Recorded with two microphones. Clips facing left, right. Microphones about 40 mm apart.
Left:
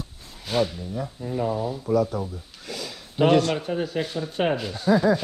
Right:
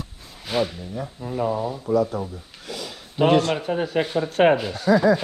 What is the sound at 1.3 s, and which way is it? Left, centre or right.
Speech, centre.